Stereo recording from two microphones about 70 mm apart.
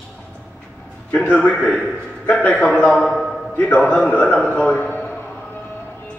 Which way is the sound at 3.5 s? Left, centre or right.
Centre.